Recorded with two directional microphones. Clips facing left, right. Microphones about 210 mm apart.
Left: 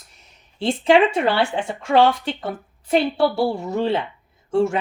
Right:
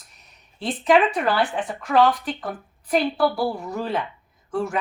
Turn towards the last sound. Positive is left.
turn(degrees=25)  # may be behind; listen again after turning